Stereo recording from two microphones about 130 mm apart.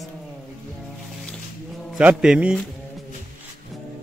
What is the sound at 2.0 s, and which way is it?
Speech, 5° right (ahead or behind).